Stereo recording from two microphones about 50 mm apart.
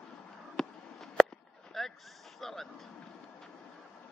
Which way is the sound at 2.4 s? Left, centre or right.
Centre.